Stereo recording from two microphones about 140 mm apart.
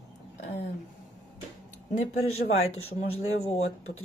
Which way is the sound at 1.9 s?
45° left (ahead or behind).